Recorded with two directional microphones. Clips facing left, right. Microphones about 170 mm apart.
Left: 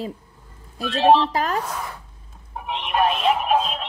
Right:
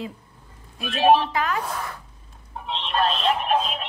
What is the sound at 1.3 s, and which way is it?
Speech, 35° left (ahead or behind).